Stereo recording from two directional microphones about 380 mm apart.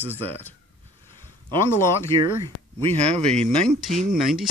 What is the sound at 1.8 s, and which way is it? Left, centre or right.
Speech, centre.